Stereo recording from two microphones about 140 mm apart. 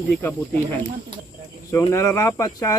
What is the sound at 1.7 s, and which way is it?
Speech, 20° left (ahead or behind).